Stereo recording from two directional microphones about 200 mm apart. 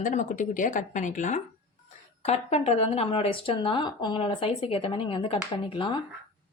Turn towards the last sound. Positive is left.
turn(degrees=25)  # may be behind; listen again after turning